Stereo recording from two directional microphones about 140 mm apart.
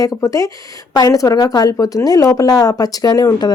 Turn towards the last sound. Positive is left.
turn(degrees=30)  # may be behind; listen again after turning